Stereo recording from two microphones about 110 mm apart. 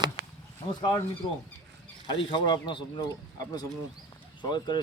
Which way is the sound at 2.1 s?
45° left (ahead or behind).